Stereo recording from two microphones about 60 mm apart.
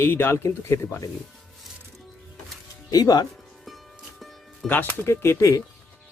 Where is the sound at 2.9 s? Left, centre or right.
Left.